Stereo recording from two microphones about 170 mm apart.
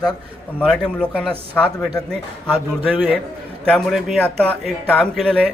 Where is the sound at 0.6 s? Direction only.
5° left (ahead or behind).